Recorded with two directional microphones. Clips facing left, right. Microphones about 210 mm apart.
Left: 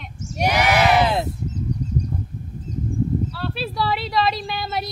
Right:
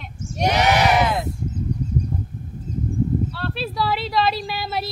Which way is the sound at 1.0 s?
25° left (ahead or behind).